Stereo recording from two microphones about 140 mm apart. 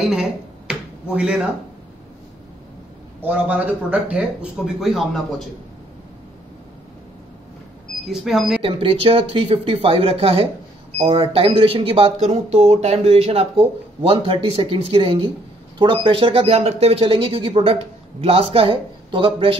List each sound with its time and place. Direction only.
0.0 s a sound: 5° right (ahead or behind)
3.2 s a man's voice: 10° right (ahead or behind)
8.1 s speech: centre (ahead or behind)
8.6 s speech: 40° right (ahead or behind)